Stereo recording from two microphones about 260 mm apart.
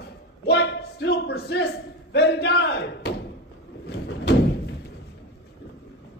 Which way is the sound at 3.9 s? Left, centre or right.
Left.